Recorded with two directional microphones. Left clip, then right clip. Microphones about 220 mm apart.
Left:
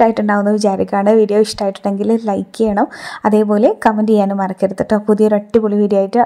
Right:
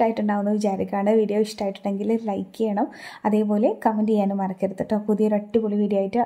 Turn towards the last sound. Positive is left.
turn(degrees=20)  # may be behind; listen again after turning